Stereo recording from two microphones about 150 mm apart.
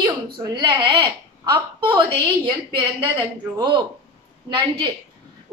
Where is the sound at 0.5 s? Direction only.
30° right (ahead or behind).